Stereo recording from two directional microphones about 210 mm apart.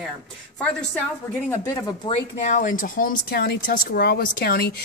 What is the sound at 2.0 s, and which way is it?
Speech, 35° left (ahead or behind).